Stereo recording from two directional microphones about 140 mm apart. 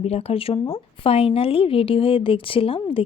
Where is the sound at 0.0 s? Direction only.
45° left (ahead or behind).